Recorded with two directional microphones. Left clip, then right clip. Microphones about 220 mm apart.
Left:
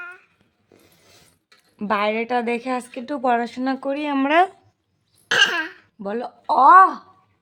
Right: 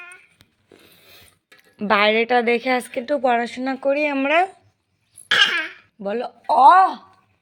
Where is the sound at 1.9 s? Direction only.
5° right (ahead or behind).